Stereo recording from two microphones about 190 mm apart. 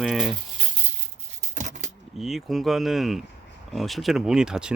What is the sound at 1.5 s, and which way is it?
Keys jangling, 40° right (ahead or behind).